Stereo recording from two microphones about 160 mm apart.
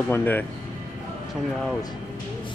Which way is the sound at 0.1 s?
10° left (ahead or behind).